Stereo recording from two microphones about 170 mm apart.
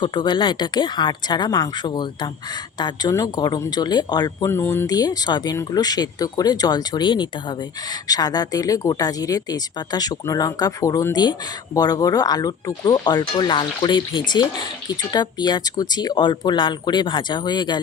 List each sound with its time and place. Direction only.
0.0 s speech: 25° left (ahead or behind)